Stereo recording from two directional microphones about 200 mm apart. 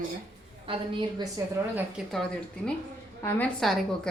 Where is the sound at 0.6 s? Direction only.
25° right (ahead or behind).